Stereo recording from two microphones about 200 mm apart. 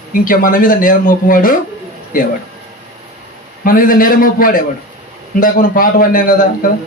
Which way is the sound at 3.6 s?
45° left (ahead or behind).